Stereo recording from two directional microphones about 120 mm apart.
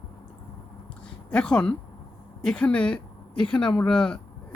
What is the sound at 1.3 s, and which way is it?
Speech, 10° left (ahead or behind).